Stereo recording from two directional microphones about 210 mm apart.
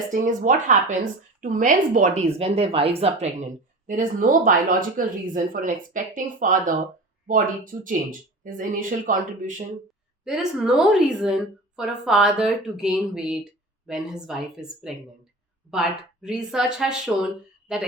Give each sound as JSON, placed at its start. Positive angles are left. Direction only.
{"t": 0.1, "sound": "a woman's voice", "side_deg": -40}
{"t": 10.2, "sound": "a woman's voice", "side_deg": -5}